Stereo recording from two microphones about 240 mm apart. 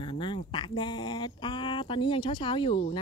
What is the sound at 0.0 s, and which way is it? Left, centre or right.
Speech, left.